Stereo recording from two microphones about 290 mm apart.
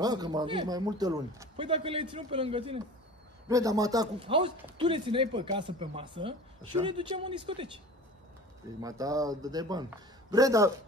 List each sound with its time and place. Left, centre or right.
0.0 s a man's voice: centre
8.8 s a man's voice: centre